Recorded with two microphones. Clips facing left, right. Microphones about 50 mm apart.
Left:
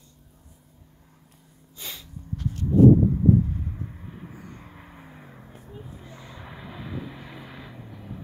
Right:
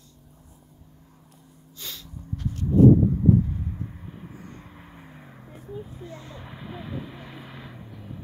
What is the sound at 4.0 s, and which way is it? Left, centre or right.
Vehicle, centre.